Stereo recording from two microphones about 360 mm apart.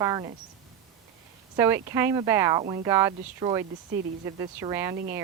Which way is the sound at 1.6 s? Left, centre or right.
Centre.